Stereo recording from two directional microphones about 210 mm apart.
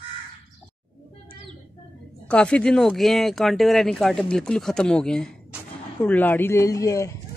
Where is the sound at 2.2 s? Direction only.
5° left (ahead or behind).